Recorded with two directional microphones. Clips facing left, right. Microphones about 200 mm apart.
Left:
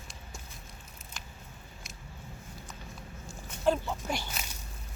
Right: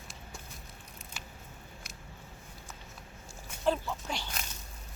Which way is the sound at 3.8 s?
10° left (ahead or behind).